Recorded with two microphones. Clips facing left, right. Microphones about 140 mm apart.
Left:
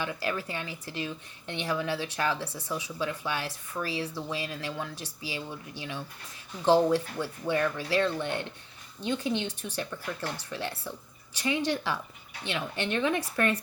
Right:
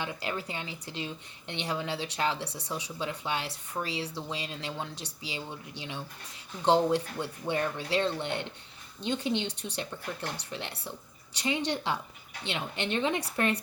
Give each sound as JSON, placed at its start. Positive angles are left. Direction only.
{"t": 0.0, "sound": "speech", "side_deg": -25}